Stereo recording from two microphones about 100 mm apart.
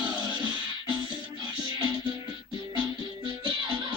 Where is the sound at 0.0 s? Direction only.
50° right (ahead or behind).